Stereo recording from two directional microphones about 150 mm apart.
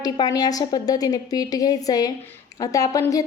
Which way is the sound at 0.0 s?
25° left (ahead or behind).